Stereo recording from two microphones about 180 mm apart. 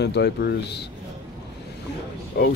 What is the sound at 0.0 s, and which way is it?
Speech, 70° left (ahead or behind).